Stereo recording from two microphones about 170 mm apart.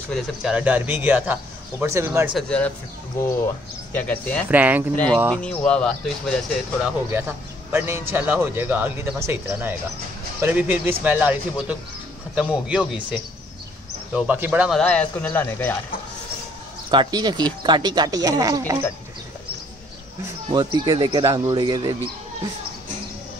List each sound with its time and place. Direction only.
0.1 s a man's voice: 5° right (ahead or behind)
2.3 s speech: 5° left (ahead or behind)
3.9 s speech: 10° left (ahead or behind)
4.5 s a man's voice: 10° right (ahead or behind)
4.9 s speech: 5° left (ahead or behind)
6.8 s a man's voice: 10° right (ahead or behind)
14.8 s speech: 5° left (ahead or behind)
16.9 s speech: 25° right (ahead or behind)
20.4 s speech: 25° right (ahead or behind)